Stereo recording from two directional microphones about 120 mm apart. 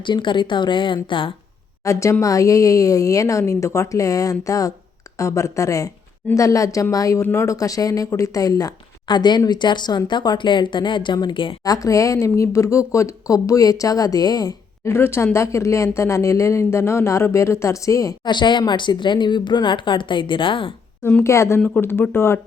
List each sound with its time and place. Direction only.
0.0 s speech: 40° left (ahead or behind)
1.8 s speech: 25° left (ahead or behind); by 11.5 s 40° left (ahead or behind)
11.6 s speech: 30° left (ahead or behind)
18.3 s speech: 40° left (ahead or behind)
21.0 s a woman's voice: 15° left (ahead or behind)
21.2 s speech: 25° left (ahead or behind)